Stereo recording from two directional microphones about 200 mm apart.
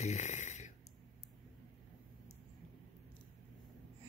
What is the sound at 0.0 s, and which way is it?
Snoring, 35° left (ahead or behind).